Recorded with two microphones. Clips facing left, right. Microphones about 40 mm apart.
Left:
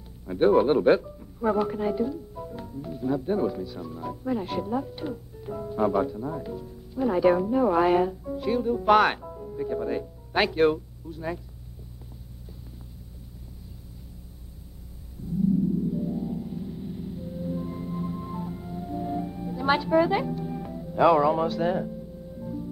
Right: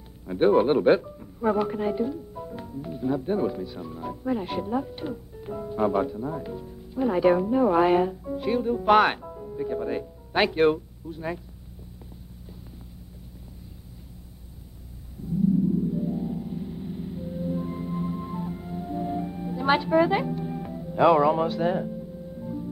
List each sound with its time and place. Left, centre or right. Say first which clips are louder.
0.4 s speech: even; centre
15.9 s music: right 1 dB; centre
20.5 s speech: left 1 dB; centre